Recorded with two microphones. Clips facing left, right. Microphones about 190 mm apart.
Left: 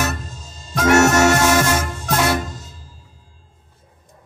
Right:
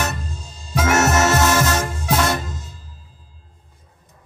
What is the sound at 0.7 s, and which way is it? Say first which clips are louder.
Harmonica: left 4 dB; centre (ahead or behind).